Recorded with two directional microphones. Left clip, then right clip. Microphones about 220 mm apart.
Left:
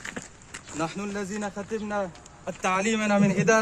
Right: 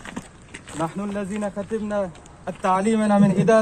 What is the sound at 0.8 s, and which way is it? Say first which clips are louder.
A man's voice: right 4 dB; 15° left (ahead or behind).